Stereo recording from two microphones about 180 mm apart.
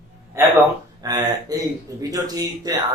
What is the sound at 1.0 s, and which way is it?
Speech, 20° right (ahead or behind).